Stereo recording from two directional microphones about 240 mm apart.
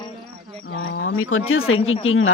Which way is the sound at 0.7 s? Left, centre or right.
Left.